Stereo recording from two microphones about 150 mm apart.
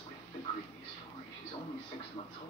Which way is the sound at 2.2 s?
35° left (ahead or behind).